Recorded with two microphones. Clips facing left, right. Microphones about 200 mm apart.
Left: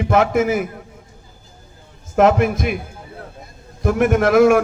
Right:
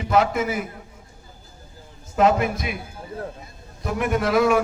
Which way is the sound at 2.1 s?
55° left (ahead or behind).